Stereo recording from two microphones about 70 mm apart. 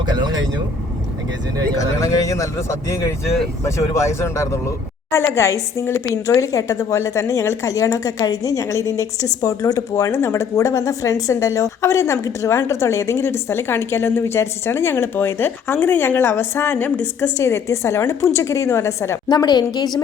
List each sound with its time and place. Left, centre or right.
0.1 s speech: right
1.8 s a woman's voice: left
9.2 s speech: left
10.2 s a woman's voice: left
17.2 s a woman's voice: left
19.3 s a woman's voice: left